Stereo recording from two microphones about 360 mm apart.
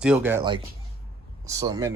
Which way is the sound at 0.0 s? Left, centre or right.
Centre.